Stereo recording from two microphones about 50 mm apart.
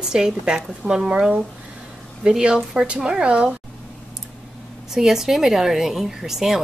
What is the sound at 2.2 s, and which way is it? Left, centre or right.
A woman's voice, centre.